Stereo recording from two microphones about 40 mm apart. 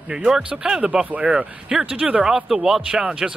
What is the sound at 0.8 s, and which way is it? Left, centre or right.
Speech, right.